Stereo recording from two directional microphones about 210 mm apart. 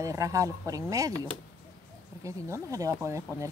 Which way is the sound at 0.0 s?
15° right (ahead or behind).